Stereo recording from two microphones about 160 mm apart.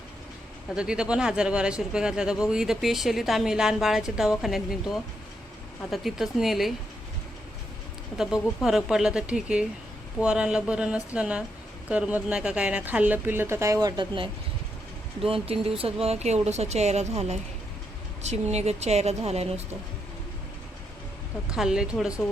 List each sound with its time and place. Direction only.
0.8 s speech: 5° right (ahead or behind)
5.9 s speech: centre (ahead or behind)
8.2 s a woman's voice: 5° right (ahead or behind)
13.8 s speech: 25° right (ahead or behind)
15.3 s speech: 35° right (ahead or behind)
21.5 s speech: 5° right (ahead or behind)